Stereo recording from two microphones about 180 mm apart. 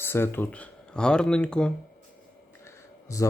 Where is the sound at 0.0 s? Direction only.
15° left (ahead or behind).